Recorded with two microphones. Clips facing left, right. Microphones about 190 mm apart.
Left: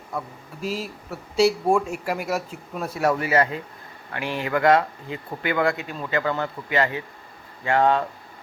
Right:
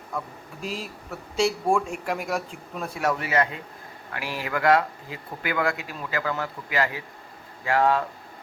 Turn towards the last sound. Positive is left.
turn(degrees=25)  # may be behind; listen again after turning